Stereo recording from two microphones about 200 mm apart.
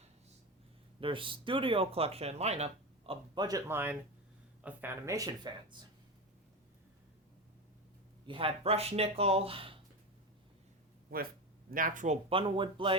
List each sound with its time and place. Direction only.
0.9 s speech: 25° right (ahead or behind)
3.1 s speech: 20° right (ahead or behind)
8.3 s speech: 25° right (ahead or behind)
11.1 s speech: 50° right (ahead or behind); by 13.0 s 25° right (ahead or behind)